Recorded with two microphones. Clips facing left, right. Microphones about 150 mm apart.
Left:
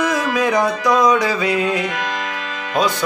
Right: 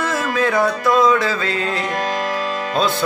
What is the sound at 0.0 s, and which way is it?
Music, 15° left (ahead or behind).